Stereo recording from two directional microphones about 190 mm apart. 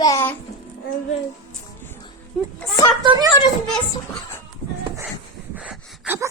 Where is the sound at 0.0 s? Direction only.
15° left (ahead or behind).